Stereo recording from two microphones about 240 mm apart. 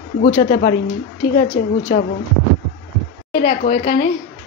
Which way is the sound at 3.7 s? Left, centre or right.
Left.